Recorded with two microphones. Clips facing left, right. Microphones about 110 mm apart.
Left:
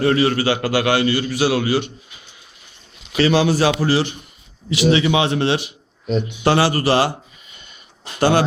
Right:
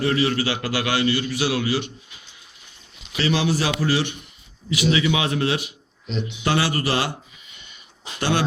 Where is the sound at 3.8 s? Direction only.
35° left (ahead or behind).